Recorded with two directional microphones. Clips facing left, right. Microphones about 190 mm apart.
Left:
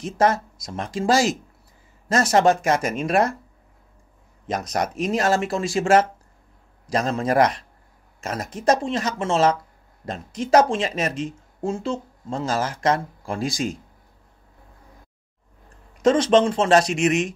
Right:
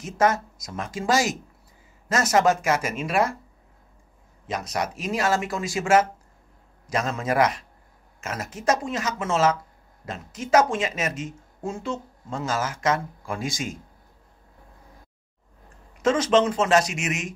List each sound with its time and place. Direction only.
0.0 s speech: 35° left (ahead or behind)
2.3 s speech: 35° left (ahead or behind)
4.8 s speech: 5° right (ahead or behind)
5.1 s speech: 40° left (ahead or behind)
16.0 s speech: 35° left (ahead or behind)